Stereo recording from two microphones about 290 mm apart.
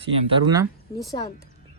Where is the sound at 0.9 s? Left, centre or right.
Centre.